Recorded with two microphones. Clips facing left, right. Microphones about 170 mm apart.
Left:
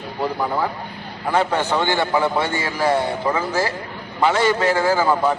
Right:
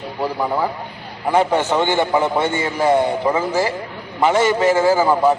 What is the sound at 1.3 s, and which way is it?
A man's voice, 15° right (ahead or behind).